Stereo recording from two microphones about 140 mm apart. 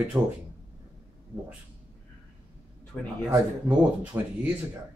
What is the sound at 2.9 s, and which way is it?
Speech, 10° left (ahead or behind).